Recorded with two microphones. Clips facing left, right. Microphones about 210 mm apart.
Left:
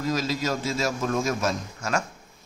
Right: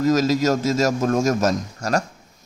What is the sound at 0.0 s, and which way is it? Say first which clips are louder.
A man's voice: right 9 dB; 45° right (ahead or behind).